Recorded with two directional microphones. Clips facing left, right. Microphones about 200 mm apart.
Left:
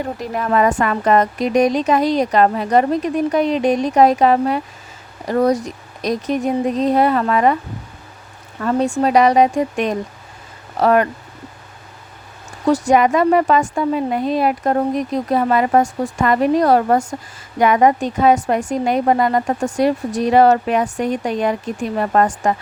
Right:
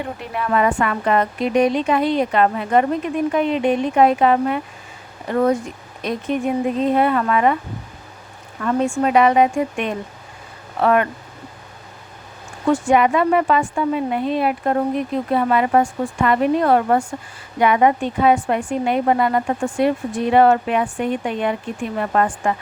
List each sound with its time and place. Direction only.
0.0 s a woman's voice: 40° left (ahead or behind)
8.6 s a woman's voice: 35° left (ahead or behind)
12.6 s a woman's voice: 40° left (ahead or behind)